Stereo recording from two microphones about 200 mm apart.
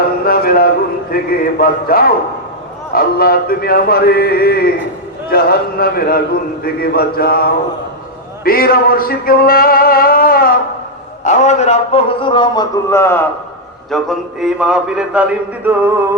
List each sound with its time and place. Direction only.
0.3 s a sound: 50° left (ahead or behind)
1.1 s a man's voice: 50° left (ahead or behind); by 13.2 s 15° left (ahead or behind)
13.9 s a man's voice: centre (ahead or behind)